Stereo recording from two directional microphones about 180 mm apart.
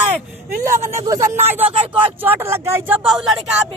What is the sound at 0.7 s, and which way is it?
Speech, 15° right (ahead or behind).